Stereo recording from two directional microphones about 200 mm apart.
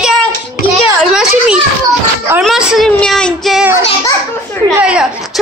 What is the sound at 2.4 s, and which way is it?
A woman's voice, centre (ahead or behind).